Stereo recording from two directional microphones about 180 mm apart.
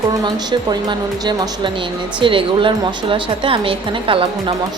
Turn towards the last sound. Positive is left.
turn(degrees=-30)  # may be behind; listen again after turning